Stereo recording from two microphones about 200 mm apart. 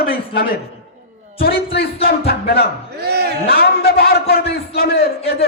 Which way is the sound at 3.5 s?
50° left (ahead or behind).